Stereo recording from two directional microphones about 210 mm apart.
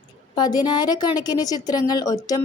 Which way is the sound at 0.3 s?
20° left (ahead or behind).